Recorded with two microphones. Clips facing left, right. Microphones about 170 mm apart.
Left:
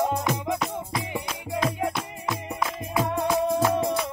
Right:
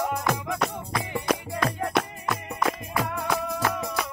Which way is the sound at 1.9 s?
70° right (ahead or behind).